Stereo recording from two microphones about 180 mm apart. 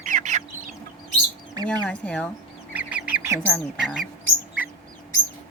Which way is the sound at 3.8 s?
5° right (ahead or behind).